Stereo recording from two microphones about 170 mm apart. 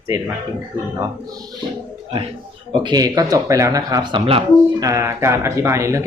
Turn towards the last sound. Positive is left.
turn(degrees=-15)  # may be behind; listen again after turning